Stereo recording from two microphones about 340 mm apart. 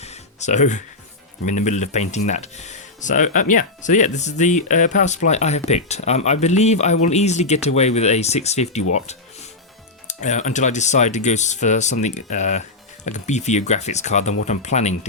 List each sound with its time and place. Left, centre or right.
0.0 s music: centre
1.5 s speech: left
10.1 s speech: left